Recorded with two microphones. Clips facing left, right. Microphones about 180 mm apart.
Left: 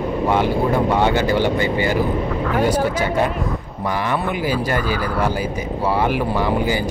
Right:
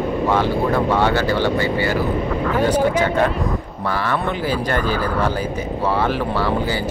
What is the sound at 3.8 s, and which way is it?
Speech, 15° left (ahead or behind).